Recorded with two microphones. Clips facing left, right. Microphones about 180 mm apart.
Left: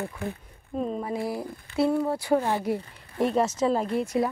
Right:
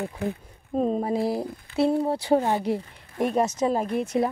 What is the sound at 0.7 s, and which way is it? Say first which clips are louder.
Speech: right 5 dB; 35° right (ahead or behind).